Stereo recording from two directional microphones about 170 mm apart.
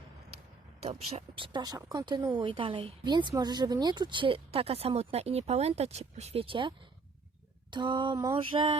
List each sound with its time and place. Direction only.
0.9 s speech: 35° right (ahead or behind)
7.7 s a sound: 25° right (ahead or behind)
8.4 s speech: 30° right (ahead or behind)